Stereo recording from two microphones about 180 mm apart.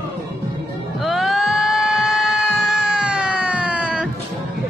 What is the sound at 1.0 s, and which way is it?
Music, centre (ahead or behind).